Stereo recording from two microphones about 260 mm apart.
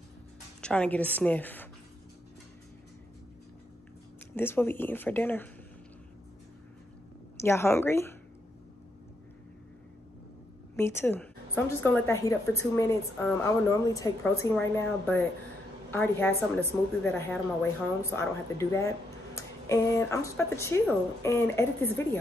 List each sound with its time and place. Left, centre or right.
0.6 s a woman's voice: centre
4.4 s speech: centre
7.3 s speech: centre
10.8 s speech: centre